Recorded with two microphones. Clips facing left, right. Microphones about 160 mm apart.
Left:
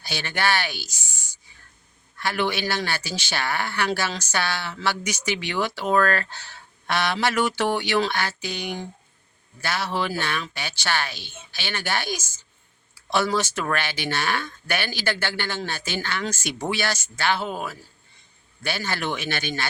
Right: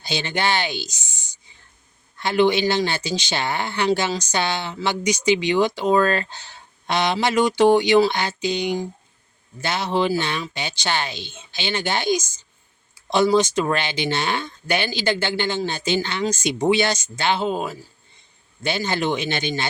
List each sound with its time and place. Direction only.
0.0 s speech: 20° right (ahead or behind)